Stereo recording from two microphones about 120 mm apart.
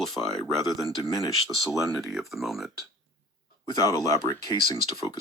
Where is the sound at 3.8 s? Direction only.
30° left (ahead or behind).